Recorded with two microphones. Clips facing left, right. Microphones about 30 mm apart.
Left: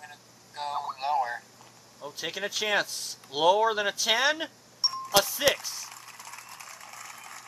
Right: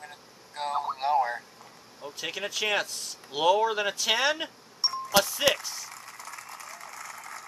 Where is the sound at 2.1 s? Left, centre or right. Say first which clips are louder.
Even; centre.